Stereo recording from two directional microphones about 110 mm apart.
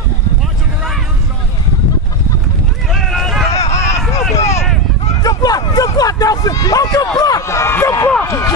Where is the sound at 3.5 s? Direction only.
80° left.